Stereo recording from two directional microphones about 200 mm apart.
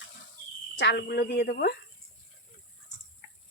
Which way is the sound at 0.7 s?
60° left (ahead or behind).